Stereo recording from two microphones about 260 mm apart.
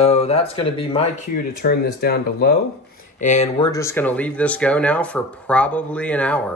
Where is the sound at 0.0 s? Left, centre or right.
Left.